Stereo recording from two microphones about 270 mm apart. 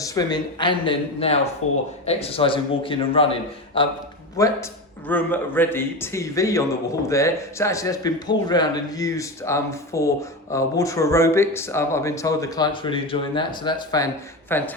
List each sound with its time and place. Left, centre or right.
0.0 s speech: centre
1.6 s speech: left
2.0 s a man's voice: left